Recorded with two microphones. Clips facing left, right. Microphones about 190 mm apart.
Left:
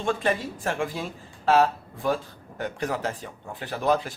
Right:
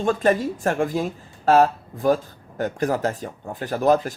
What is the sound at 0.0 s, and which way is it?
Speech, 40° right (ahead or behind).